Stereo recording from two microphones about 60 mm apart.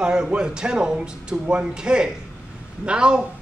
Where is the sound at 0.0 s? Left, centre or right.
Centre.